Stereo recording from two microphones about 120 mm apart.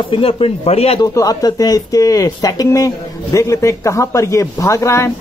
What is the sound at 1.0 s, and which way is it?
Speech, 30° left (ahead or behind).